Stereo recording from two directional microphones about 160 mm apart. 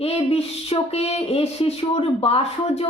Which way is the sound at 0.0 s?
40° left (ahead or behind).